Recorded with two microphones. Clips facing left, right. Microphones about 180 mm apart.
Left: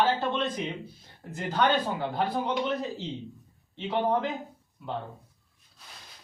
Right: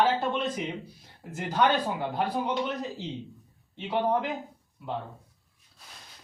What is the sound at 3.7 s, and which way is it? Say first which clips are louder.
Speech: even; 5° right (ahead or behind).